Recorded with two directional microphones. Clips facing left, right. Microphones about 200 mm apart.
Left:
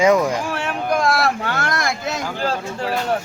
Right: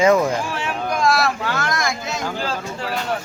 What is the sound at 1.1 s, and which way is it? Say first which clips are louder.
Speech: even; 55° left (ahead or behind).